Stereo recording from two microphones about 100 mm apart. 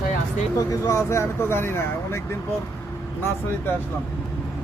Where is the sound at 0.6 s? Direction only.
35° left (ahead or behind).